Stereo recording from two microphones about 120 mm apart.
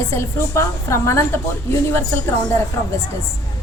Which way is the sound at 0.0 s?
20° left (ahead or behind).